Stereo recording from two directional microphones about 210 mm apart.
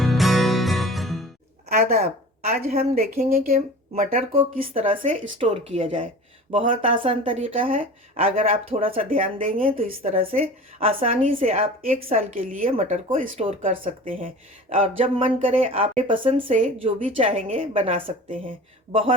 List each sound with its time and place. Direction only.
0.0 s music: centre (ahead or behind)
1.7 s speech: 45° right (ahead or behind)
4.7 s a woman's voice: 30° right (ahead or behind)
9.0 s a woman's voice: 40° right (ahead or behind)
13.3 s a woman's voice: 25° right (ahead or behind)